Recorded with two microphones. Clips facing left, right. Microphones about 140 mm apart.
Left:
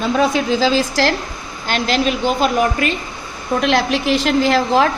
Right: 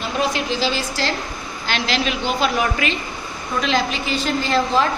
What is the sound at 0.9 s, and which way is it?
Speech, 90° left.